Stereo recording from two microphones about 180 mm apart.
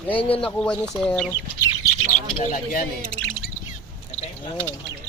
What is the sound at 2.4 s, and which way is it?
Speech, 45° left (ahead or behind).